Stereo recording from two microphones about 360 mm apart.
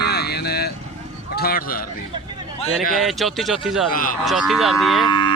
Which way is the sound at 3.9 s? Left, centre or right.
Left.